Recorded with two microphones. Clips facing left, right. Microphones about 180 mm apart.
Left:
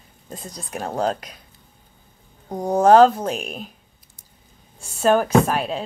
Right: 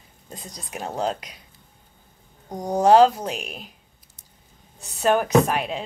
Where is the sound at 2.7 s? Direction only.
50° left (ahead or behind).